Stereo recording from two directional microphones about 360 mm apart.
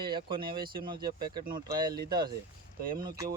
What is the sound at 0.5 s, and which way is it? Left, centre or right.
Speech, right.